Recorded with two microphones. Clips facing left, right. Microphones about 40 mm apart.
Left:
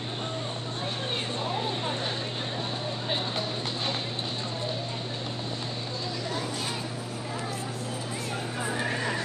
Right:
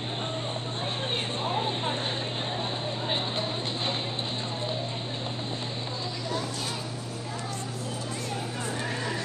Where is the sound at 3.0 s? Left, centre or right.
Centre.